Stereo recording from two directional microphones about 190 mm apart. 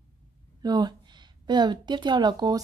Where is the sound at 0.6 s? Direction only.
20° right (ahead or behind).